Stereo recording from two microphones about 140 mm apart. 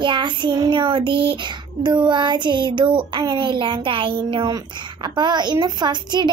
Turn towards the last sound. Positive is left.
turn(degrees=-30)  # may be behind; listen again after turning